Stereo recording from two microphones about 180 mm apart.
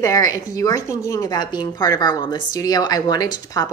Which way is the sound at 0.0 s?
20° left (ahead or behind).